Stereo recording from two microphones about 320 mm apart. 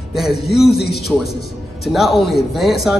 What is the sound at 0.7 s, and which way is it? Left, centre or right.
Speech, left.